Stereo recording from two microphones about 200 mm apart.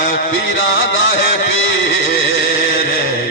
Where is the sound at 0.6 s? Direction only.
70° left (ahead or behind).